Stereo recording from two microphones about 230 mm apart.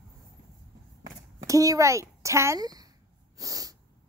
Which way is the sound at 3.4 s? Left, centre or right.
Centre.